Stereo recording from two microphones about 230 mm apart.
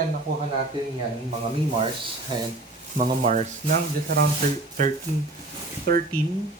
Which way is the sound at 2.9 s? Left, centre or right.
Right.